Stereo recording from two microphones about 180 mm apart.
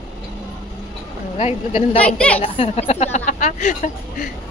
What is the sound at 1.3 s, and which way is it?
Speech, 35° left (ahead or behind).